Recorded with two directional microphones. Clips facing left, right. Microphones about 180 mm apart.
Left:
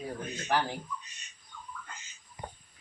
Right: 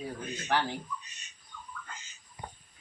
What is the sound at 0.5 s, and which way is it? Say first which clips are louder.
Speech: even; 10° left (ahead or behind).